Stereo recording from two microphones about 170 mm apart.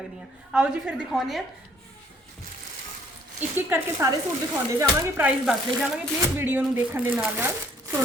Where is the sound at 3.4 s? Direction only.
15° right (ahead or behind).